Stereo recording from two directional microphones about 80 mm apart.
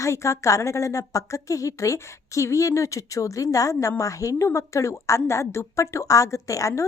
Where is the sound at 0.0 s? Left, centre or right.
Left.